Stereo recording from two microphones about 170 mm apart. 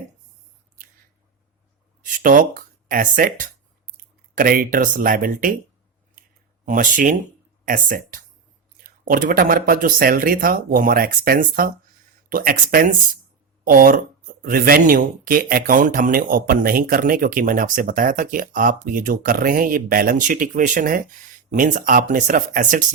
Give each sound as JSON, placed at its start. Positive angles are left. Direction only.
{"t": 2.0, "sound": "speech", "side_deg": -50}
{"t": 6.7, "sound": "speech", "side_deg": -50}